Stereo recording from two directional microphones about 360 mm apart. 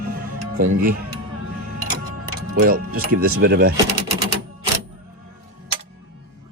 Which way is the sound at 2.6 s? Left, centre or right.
Right.